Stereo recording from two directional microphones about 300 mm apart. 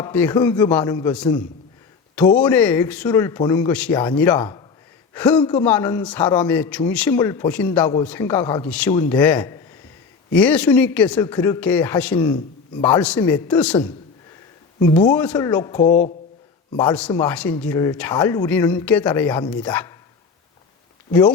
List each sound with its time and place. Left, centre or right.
0.0 s a man's voice: centre
15.9 s speech: left
16.7 s speech: centre
21.1 s a man's voice: centre